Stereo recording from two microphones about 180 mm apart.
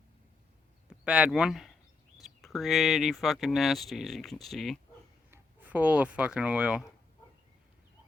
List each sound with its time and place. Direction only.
0.9 s speech: 5° right (ahead or behind)
5.3 s speech: 10° right (ahead or behind)